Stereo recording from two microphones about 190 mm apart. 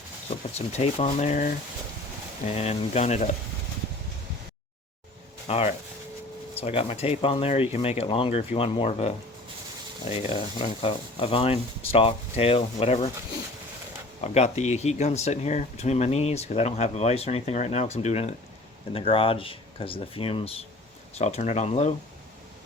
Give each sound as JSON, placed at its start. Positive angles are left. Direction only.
{"t": 0.5, "sound": "speech", "side_deg": 35}
{"t": 5.5, "sound": "speech", "side_deg": 30}
{"t": 14.2, "sound": "speech", "side_deg": 35}